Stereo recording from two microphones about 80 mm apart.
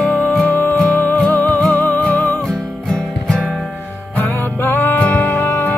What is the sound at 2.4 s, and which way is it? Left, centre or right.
Music, centre.